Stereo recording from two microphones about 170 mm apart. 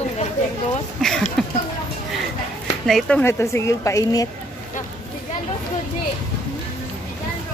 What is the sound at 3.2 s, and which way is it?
A woman's voice, 15° left (ahead or behind).